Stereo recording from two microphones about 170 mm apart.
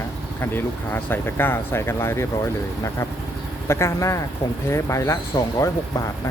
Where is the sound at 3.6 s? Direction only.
15° left (ahead or behind).